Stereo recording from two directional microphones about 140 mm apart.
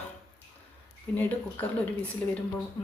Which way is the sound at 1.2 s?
10° left (ahead or behind).